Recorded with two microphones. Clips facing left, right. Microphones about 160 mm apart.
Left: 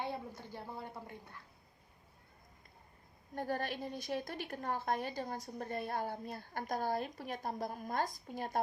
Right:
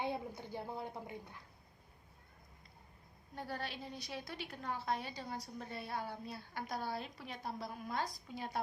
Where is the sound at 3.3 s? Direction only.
45° left (ahead or behind).